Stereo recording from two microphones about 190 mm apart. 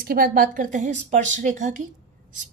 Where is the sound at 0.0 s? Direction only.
50° right (ahead or behind).